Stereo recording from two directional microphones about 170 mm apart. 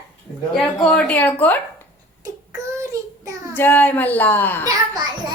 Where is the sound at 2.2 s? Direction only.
20° right (ahead or behind).